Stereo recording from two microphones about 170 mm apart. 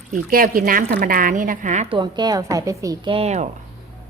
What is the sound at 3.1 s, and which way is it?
Speech, 40° right (ahead or behind).